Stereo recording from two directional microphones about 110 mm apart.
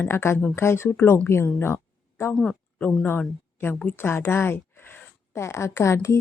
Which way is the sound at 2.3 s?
5° left (ahead or behind).